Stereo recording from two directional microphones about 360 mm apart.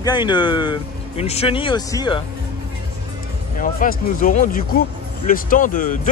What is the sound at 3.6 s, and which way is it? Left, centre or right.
Speech, left.